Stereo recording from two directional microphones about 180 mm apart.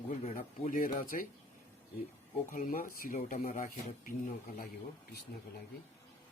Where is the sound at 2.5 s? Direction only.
50° left (ahead or behind).